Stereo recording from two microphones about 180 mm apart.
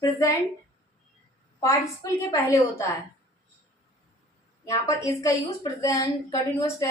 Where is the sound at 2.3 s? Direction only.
15° left (ahead or behind).